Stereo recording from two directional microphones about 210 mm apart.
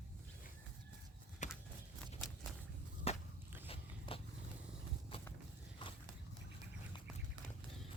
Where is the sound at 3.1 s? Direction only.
30° left (ahead or behind).